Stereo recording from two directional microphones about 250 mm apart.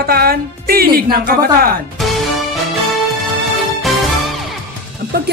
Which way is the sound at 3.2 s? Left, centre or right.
Centre.